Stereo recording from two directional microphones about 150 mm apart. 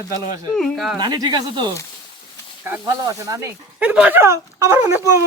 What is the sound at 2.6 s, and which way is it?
Speech, 20° right (ahead or behind).